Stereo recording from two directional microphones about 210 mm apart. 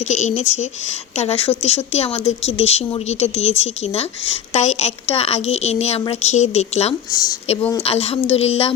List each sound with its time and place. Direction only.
0.1 s a woman's voice: 35° left (ahead or behind)